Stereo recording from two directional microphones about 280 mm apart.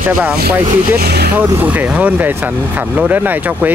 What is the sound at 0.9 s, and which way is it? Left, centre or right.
Speech, right.